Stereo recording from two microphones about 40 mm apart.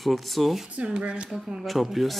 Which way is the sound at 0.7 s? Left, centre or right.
Right.